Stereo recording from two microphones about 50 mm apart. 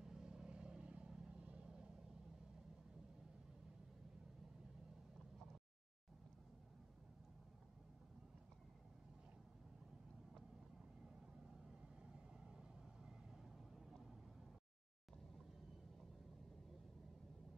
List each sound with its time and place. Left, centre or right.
0.0 s vehicle: centre
12.0 s vehicle: centre